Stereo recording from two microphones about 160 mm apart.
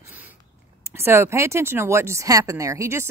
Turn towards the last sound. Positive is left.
turn(degrees=-20)  # may be behind; listen again after turning